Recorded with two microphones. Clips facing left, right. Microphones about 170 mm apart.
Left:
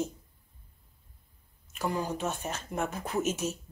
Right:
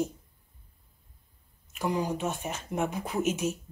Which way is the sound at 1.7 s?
15° right (ahead or behind).